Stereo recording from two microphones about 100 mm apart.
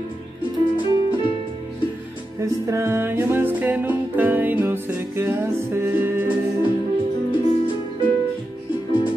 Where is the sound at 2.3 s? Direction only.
30° right (ahead or behind).